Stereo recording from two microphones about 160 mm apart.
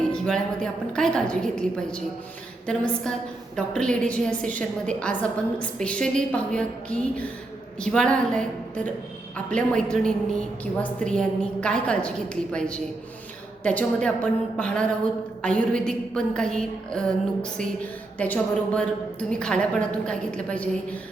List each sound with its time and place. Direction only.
0.1 s a woman's voice: 5° left (ahead or behind)